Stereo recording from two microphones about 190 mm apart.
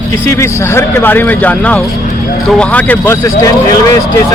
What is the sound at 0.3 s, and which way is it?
A man's voice, 15° left (ahead or behind).